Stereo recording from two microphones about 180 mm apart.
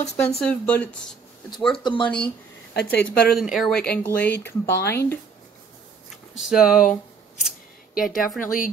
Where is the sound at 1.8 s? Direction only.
25° left (ahead or behind).